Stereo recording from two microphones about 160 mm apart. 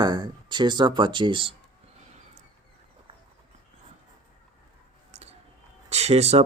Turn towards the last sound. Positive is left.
turn(degrees=-40)  # may be behind; listen again after turning